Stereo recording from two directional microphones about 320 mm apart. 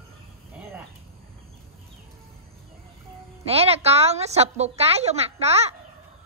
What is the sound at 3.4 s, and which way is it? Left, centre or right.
A woman's voice, centre.